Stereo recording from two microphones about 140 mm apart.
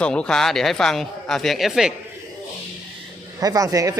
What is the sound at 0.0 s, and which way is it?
Speech, 5° left (ahead or behind).